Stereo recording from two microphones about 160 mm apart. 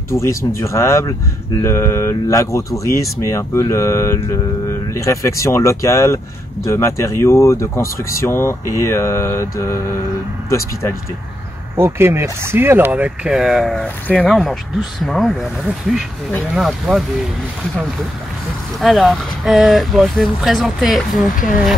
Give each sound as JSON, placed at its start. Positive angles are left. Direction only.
{"t": 0.1, "sound": "speech", "side_deg": 20}
{"t": 11.7, "sound": "speech", "side_deg": -15}
{"t": 18.8, "sound": "speech", "side_deg": 0}